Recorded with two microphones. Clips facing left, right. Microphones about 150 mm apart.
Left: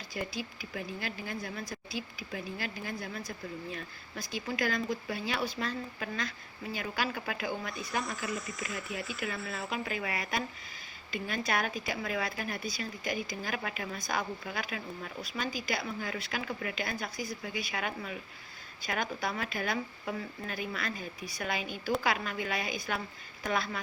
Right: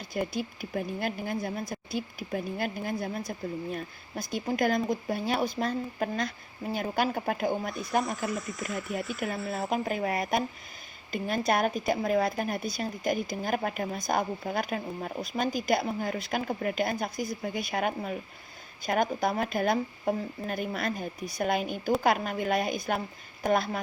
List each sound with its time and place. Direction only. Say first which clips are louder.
0.1 s speech: right 6 dB; 55° right (ahead or behind)
8.0 s speech: right 5 dB; centre (ahead or behind)
9.5 s speech: right 6 dB; 45° right (ahead or behind)